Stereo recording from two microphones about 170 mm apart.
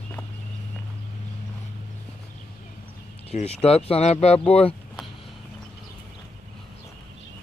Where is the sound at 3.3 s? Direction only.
35° left (ahead or behind).